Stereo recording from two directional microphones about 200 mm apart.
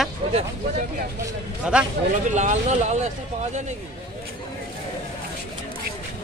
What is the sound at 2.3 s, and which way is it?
Speech, 35° right (ahead or behind).